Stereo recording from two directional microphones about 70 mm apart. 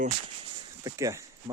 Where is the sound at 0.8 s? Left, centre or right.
Right.